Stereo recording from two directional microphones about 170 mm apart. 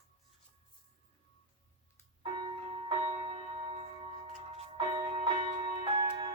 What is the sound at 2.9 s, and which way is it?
Music, 35° right (ahead or behind).